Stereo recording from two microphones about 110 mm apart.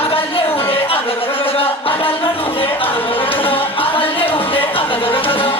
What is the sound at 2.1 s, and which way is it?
Music, 60° left (ahead or behind).